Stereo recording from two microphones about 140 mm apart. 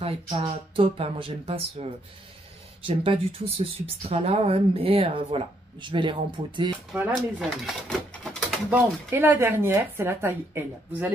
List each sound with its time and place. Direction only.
0.0 s speech: 45° right (ahead or behind)
6.9 s speech: 5° right (ahead or behind)
7.4 s speech: 5° left (ahead or behind)
8.6 s speech: 15° right (ahead or behind)